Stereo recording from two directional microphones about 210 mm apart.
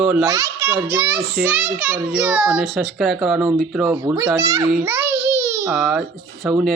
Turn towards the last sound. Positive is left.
turn(degrees=0)  # may be behind; listen again after turning